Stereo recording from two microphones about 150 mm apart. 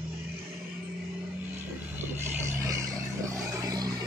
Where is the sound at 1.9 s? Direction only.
15° right (ahead or behind).